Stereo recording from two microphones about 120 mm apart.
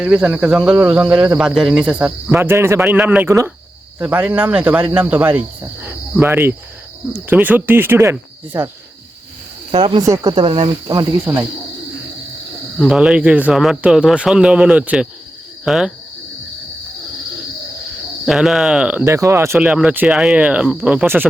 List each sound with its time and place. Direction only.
0.0 s speech: 10° right (ahead or behind)
2.4 s speech: 20° right (ahead or behind)
2.8 s speech: 10° right (ahead or behind)
3.2 s speech: 25° right (ahead or behind)
4.0 s speech: 15° right (ahead or behind)
9.7 s speech: 45° right (ahead or behind)
10.0 s speech: 30° right (ahead or behind)
10.3 s speech: 45° right (ahead or behind); by 11.4 s 30° right (ahead or behind)
12.8 s speech: 5° right (ahead or behind)
18.3 s speech: 5° right (ahead or behind)
19.0 s speech: 25° right (ahead or behind)
19.5 s speech: 10° right (ahead or behind)